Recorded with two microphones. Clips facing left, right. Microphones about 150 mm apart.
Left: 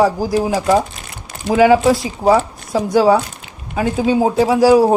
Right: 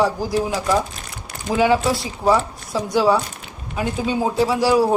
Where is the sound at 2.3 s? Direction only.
45° left (ahead or behind).